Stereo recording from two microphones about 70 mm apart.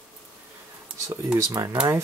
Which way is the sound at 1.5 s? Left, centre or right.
Right.